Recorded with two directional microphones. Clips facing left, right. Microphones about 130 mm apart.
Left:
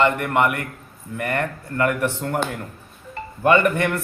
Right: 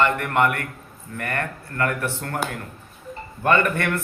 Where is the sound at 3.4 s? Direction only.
15° left (ahead or behind).